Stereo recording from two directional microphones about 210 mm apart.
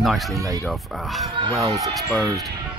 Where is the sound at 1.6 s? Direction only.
15° right (ahead or behind).